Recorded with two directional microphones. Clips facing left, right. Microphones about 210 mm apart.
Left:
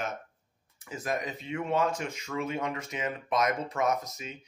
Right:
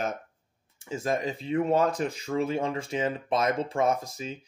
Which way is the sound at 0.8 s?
25° right (ahead or behind).